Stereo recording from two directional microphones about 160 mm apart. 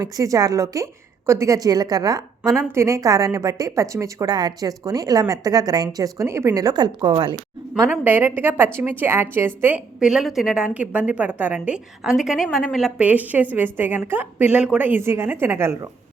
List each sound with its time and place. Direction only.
0.0 s a woman's voice: 20° right (ahead or behind)
7.7 s a woman's voice: 10° right (ahead or behind)